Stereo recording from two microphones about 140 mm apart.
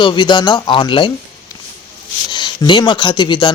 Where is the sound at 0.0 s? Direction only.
35° left (ahead or behind).